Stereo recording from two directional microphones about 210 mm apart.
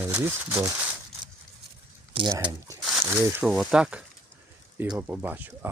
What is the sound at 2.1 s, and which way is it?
Speech, 20° right (ahead or behind).